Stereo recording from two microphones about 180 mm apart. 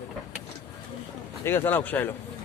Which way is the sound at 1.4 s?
10° left (ahead or behind).